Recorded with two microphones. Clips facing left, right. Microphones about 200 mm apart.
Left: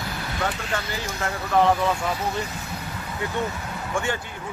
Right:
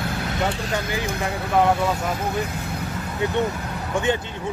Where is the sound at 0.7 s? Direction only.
15° right (ahead or behind).